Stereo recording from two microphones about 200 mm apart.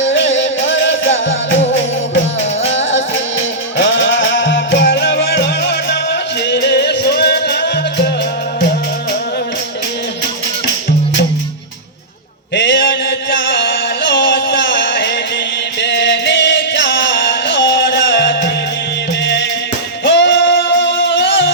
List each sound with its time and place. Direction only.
0.0 s music: 70° left (ahead or behind)
2.6 s music: 70° left (ahead or behind)
12.5 s music: 65° left (ahead or behind)